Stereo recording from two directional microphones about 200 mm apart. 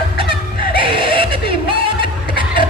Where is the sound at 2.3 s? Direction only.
25° right (ahead or behind).